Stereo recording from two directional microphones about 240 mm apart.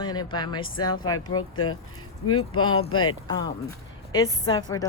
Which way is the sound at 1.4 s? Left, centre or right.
Left.